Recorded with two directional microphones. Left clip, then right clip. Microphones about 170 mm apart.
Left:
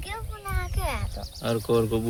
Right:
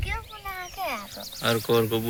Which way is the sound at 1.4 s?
15° left (ahead or behind).